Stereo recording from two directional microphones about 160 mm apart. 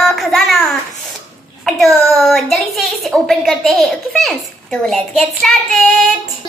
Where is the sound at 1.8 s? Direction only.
Centre (ahead or behind).